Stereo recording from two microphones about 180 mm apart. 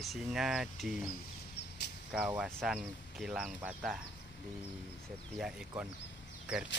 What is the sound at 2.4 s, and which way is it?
Speech, centre (ahead or behind).